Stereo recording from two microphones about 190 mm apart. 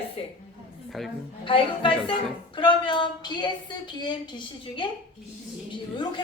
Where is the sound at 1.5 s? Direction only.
25° left (ahead or behind).